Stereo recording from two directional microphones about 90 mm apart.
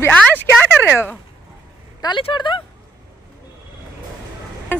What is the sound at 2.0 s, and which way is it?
Speech, 60° left (ahead or behind).